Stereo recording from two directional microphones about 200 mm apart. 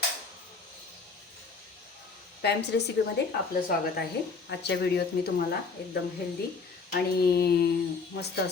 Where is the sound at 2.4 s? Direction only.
55° left (ahead or behind).